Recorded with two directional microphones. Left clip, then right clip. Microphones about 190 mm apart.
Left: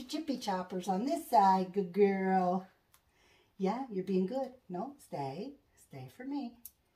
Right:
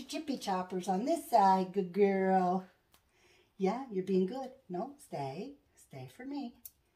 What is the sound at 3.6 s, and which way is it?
Speech, 25° right (ahead or behind).